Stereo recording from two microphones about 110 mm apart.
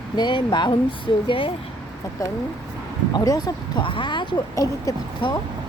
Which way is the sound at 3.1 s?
35° left (ahead or behind).